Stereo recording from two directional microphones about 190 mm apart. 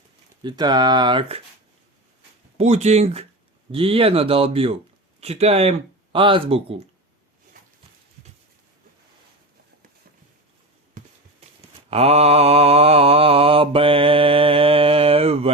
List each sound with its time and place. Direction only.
0.4 s speech: 20° right (ahead or behind)
2.6 s speech: 35° right (ahead or behind)
11.9 s mantra: 30° right (ahead or behind)